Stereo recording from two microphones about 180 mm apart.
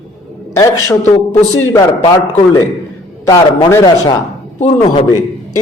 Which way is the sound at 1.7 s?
25° left (ahead or behind).